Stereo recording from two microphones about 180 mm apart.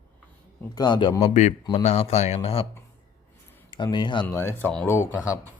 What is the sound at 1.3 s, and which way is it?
Speech, 40° left (ahead or behind).